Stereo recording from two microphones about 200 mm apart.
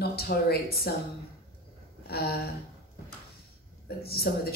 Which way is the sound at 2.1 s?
50° left (ahead or behind).